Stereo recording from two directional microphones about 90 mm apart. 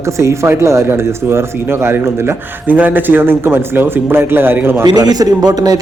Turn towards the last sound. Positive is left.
turn(degrees=-45)  # may be behind; listen again after turning